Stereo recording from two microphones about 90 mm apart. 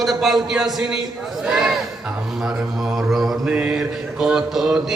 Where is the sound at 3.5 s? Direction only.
10° right (ahead or behind).